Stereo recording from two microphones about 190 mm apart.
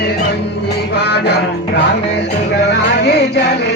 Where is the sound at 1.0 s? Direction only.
60° left (ahead or behind).